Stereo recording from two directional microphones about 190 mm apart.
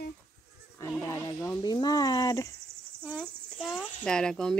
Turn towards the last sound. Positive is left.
turn(degrees=5)  # may be behind; listen again after turning